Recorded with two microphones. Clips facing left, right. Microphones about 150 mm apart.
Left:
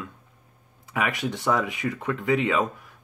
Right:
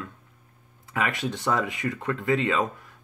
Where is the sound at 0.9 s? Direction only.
10° left (ahead or behind).